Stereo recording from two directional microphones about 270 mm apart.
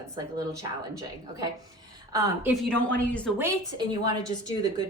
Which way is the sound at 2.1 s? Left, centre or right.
Centre.